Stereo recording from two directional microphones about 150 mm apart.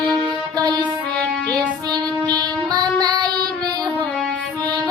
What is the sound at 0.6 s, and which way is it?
Music, 25° right (ahead or behind).